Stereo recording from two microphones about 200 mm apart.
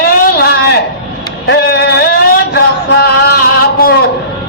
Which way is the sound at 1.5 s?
55° left (ahead or behind).